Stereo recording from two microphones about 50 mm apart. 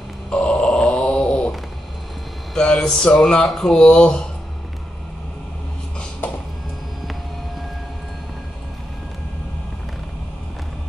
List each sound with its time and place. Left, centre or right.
0.3 s grunt: left
2.5 s speech: centre